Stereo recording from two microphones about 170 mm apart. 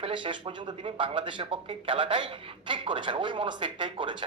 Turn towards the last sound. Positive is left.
turn(degrees=-30)  # may be behind; listen again after turning